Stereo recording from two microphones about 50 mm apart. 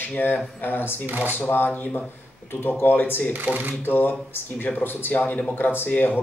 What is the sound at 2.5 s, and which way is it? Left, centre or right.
Speech, left.